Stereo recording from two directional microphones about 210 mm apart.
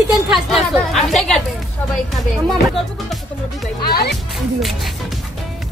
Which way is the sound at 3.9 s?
45° left (ahead or behind).